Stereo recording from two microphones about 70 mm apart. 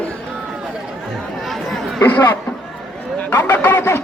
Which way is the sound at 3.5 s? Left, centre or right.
Left.